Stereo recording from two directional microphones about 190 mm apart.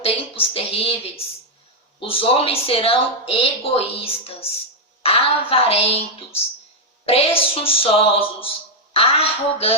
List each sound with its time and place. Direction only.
0.0 s a woman's voice: 30° left (ahead or behind)